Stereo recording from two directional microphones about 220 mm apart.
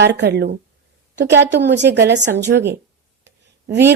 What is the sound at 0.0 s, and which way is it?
Speech, 50° right (ahead or behind).